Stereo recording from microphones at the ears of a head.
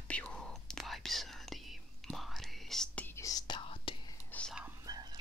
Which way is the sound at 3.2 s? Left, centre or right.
Left.